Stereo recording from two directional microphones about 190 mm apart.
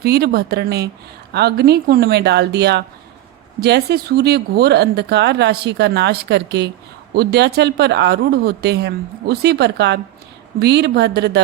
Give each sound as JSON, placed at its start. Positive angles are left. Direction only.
{"t": 0.0, "sound": "speech", "side_deg": -60}